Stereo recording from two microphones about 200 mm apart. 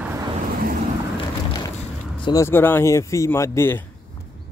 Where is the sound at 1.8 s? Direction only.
25° left (ahead or behind).